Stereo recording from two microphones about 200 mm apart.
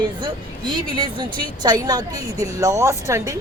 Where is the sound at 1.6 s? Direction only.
20° right (ahead or behind).